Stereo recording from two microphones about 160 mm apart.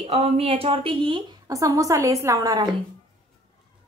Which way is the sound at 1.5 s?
20° right (ahead or behind).